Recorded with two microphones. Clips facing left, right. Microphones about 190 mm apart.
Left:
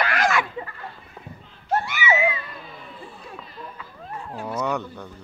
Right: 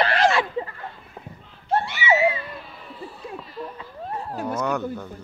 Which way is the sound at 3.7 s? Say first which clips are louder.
Right 4 dB; 35° right (ahead or behind).